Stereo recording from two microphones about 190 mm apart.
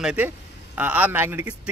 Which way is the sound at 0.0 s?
5° right (ahead or behind).